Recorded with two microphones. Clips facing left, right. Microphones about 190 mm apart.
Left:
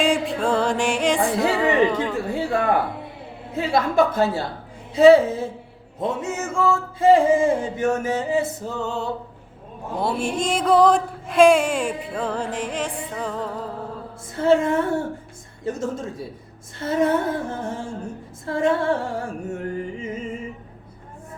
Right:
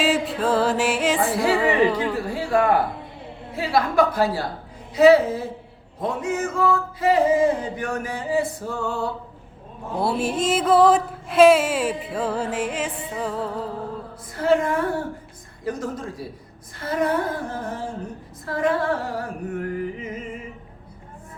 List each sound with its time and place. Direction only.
0.0 s music: 5° right (ahead or behind)
3.5 s music: 25° left (ahead or behind)
10.0 s music: 5° right (ahead or behind)
14.3 s music: 25° left (ahead or behind)